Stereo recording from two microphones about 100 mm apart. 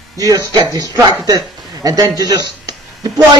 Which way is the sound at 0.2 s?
40° right (ahead or behind).